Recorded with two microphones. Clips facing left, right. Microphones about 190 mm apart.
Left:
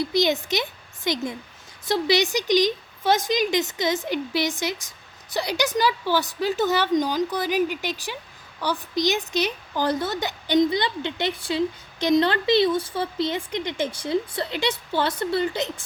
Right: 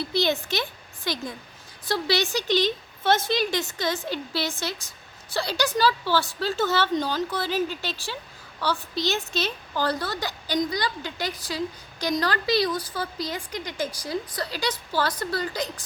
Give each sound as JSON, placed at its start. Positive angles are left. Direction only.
{"t": 0.0, "sound": "a woman's voice", "side_deg": 15}